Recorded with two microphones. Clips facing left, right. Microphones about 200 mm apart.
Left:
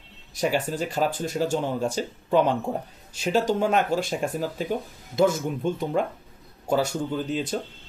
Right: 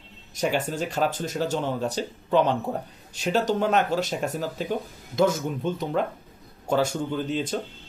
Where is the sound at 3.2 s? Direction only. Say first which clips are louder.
Left 1 dB; 40° left (ahead or behind).